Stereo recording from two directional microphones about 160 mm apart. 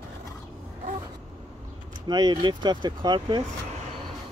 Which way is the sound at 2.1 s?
25° right (ahead or behind).